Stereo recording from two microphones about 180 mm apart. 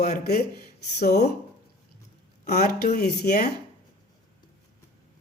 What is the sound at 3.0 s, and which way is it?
Speech, 65° left (ahead or behind).